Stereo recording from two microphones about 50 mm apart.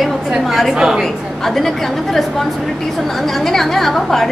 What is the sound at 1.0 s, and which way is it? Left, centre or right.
A woman's voice, centre.